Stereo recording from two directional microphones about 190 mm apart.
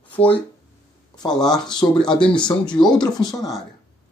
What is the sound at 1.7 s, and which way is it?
Speech, 5° left (ahead or behind).